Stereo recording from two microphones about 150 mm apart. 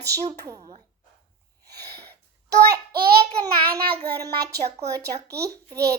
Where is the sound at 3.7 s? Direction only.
25° right (ahead or behind).